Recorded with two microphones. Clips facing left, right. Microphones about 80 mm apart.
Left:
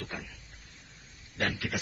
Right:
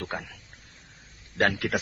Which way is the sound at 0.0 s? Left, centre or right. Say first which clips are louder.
Right 6 dB; right.